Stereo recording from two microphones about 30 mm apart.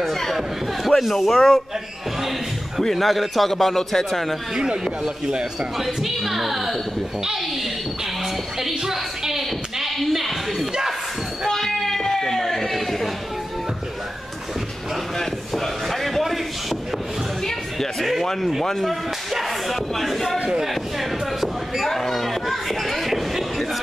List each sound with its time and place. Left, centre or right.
0.0 s a sound: centre
0.4 s speech: centre
2.8 s speech: centre
4.6 s speech: right
5.8 s speech: centre
8.5 s a woman's voice: centre
11.4 s a sound: centre
15.1 s a sound: centre
17.9 s speech: centre
21.8 s speech: centre